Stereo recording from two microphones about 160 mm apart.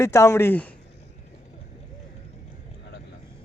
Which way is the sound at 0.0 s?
15° left (ahead or behind).